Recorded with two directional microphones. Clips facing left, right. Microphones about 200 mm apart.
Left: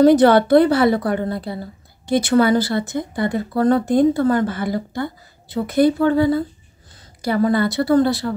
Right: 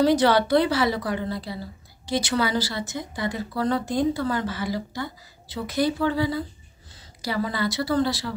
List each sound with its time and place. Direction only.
0.0 s a woman's voice: 55° left (ahead or behind)